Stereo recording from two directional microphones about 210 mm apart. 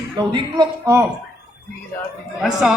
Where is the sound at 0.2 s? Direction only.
20° right (ahead or behind).